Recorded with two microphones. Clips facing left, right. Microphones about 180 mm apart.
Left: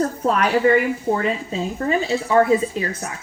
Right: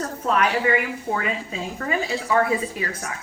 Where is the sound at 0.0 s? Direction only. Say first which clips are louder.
Left 3 dB; 40° left (ahead or behind).